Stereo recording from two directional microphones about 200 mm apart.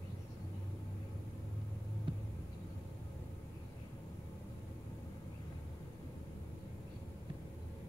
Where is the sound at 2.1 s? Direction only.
25° right (ahead or behind).